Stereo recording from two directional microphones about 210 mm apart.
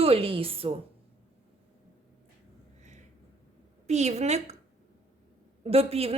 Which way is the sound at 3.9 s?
30° right (ahead or behind).